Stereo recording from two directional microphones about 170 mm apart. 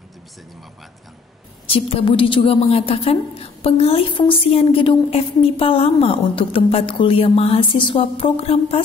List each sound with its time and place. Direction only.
1.7 s a woman's voice: 35° left (ahead or behind)